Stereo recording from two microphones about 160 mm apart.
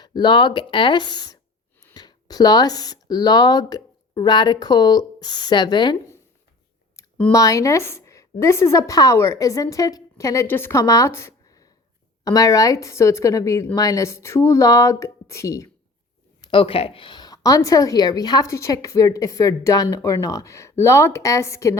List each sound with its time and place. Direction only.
0.0 s a woman's voice: 30° left (ahead or behind)
7.3 s a woman's voice: 20° left (ahead or behind)
16.4 s a woman's voice: 30° left (ahead or behind)